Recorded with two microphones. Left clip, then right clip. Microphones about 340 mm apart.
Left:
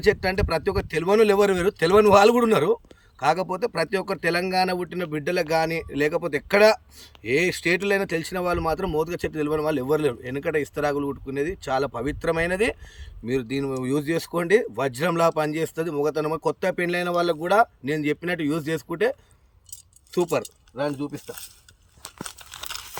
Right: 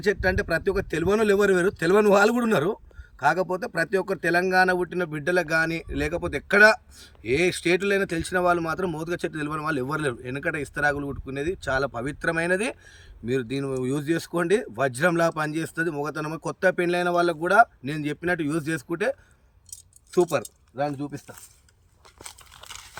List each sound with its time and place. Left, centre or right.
0.0 s speech: centre
19.7 s keys jangling: centre
21.2 s speech: centre
22.7 s crumpling: centre